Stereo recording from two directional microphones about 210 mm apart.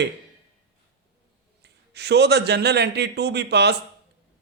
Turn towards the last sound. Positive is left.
turn(degrees=-55)  # may be behind; listen again after turning